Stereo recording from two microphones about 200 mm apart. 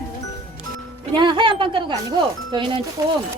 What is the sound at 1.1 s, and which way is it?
Speech, 25° right (ahead or behind).